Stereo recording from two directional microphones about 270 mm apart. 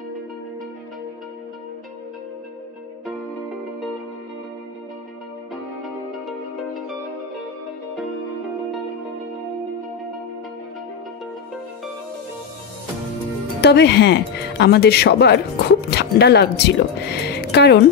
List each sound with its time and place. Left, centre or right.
5.5 s music: centre
13.6 s speech: left